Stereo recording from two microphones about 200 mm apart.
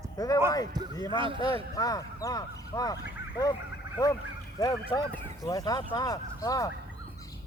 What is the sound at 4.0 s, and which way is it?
Speech, 20° left (ahead or behind).